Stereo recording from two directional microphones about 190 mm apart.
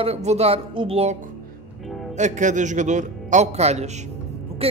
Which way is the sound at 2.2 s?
40° right (ahead or behind).